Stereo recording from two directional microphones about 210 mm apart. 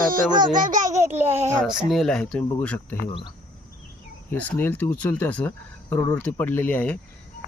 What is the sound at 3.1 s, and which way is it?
Speech, 25° left (ahead or behind).